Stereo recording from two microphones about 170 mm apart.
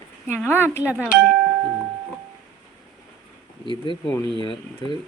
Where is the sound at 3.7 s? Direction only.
30° left (ahead or behind).